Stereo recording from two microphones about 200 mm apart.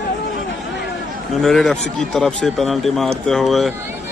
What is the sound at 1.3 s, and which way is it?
A man's voice, centre (ahead or behind).